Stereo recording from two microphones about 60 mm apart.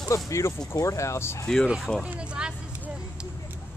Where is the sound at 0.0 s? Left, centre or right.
Left.